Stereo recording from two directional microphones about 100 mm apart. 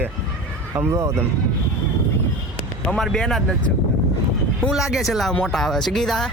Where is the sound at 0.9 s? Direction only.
30° right (ahead or behind).